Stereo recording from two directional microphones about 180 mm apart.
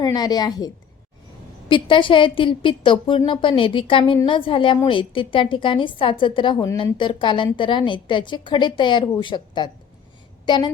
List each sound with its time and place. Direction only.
0.0 s a woman's voice: 20° left (ahead or behind)
1.7 s a woman's voice: 30° left (ahead or behind)